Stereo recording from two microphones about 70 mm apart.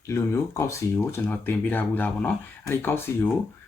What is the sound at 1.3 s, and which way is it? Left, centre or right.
Speech, left.